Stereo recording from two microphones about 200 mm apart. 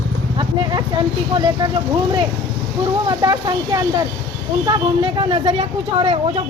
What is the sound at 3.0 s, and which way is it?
Speech, 20° right (ahead or behind).